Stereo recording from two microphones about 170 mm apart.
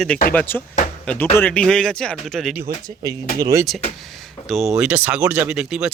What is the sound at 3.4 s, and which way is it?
Speech, 20° right (ahead or behind).